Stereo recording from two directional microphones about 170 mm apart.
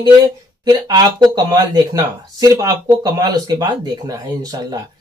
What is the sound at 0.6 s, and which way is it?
Speech, 25° right (ahead or behind).